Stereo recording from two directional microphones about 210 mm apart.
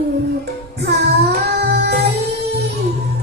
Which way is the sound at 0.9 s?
50° right (ahead or behind).